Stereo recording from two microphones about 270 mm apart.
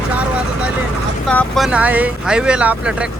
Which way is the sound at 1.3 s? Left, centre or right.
Centre.